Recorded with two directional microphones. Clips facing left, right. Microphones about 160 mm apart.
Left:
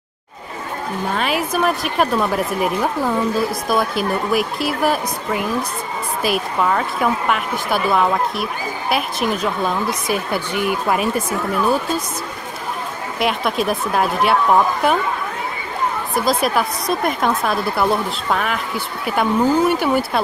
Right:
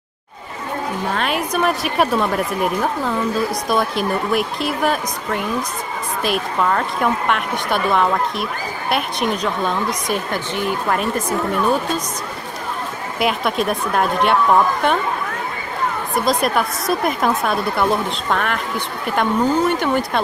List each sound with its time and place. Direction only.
1.1 s a woman's voice: 5° left (ahead or behind)
13.2 s a woman's voice: centre (ahead or behind)
16.2 s a woman's voice: centre (ahead or behind)